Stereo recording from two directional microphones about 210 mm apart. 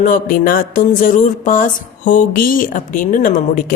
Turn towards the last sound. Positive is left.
turn(degrees=40)  # may be behind; listen again after turning